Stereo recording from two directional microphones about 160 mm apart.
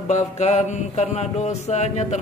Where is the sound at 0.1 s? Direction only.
45° left (ahead or behind).